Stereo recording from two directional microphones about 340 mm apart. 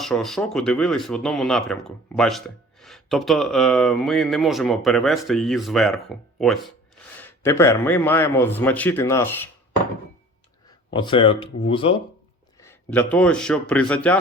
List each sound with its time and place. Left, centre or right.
0.0 s a man's voice: centre
10.9 s a man's voice: centre